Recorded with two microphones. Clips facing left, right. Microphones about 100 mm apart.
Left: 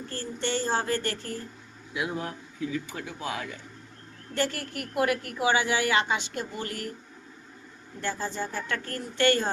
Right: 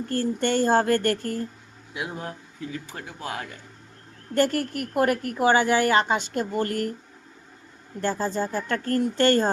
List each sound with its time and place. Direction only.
0.1 s a woman's voice: 50° right (ahead or behind)
2.7 s a woman's voice: 45° right (ahead or behind)
8.0 s speech: 40° right (ahead or behind)